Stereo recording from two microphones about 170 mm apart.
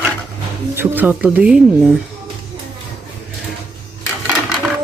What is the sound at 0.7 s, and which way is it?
Speech, 10° right (ahead or behind).